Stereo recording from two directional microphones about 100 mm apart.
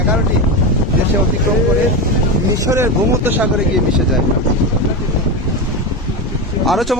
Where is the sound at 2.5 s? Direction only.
30° right (ahead or behind).